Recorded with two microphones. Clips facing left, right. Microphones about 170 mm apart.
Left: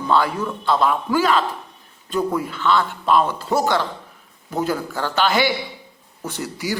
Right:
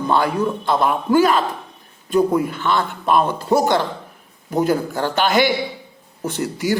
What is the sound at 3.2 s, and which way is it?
Speech, 15° right (ahead or behind).